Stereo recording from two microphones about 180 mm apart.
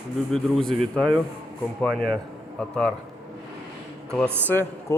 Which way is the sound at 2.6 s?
5° left (ahead or behind).